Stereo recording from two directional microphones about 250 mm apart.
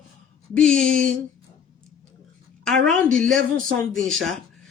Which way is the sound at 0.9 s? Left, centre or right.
Right.